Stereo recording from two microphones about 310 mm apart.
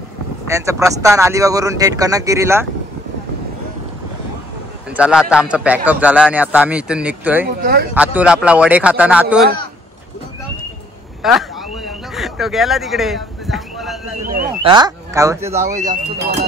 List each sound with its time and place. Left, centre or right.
0.5 s speech: centre
4.9 s a man's voice: centre
7.4 s speech: right
7.9 s a man's voice: centre
11.2 s a sound: centre
14.6 s speech: centre
15.7 s speech: right